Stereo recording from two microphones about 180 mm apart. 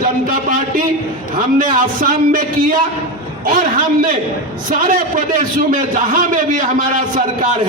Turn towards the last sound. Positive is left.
turn(degrees=-45)  # may be behind; listen again after turning